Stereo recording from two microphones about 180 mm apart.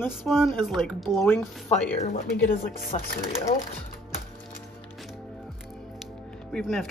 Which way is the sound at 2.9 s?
35° left (ahead or behind).